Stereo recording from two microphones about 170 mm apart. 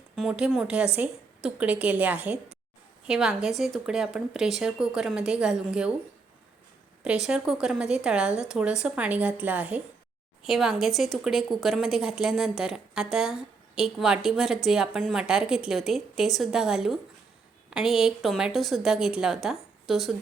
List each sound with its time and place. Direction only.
0.2 s speech: 5° right (ahead or behind)
7.0 s speech: 5° right (ahead or behind)